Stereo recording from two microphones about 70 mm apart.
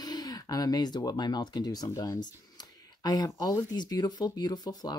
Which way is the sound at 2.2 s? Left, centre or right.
Left.